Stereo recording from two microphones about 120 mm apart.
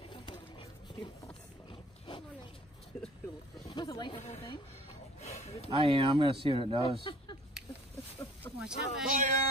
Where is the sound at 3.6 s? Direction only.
30° left (ahead or behind).